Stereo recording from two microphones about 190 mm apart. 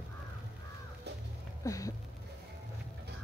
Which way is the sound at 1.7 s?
15° left (ahead or behind).